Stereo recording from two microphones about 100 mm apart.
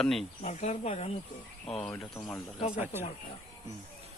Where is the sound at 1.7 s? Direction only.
10° left (ahead or behind).